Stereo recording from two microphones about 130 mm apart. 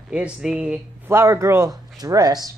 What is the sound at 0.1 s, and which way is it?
Speech, 5° right (ahead or behind).